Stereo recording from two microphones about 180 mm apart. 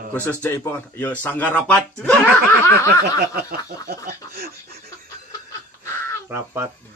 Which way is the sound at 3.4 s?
55° right (ahead or behind).